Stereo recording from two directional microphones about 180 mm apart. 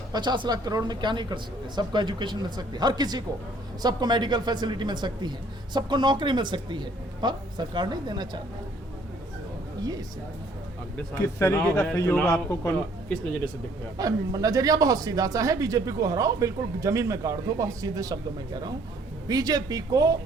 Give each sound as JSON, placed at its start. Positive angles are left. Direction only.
{"t": 0.1, "sound": "speech", "side_deg": -25}
{"t": 10.9, "sound": "speech", "side_deg": 15}
{"t": 14.0, "sound": "speech", "side_deg": -20}